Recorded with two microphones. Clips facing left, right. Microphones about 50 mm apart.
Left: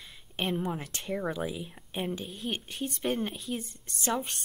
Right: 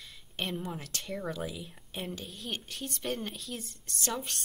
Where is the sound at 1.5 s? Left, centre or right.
Centre.